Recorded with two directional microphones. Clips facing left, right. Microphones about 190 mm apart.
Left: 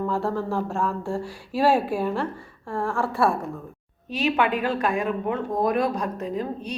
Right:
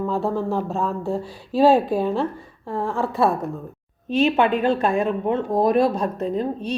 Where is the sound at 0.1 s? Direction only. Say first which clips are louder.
Right 3 dB; 15° right (ahead or behind).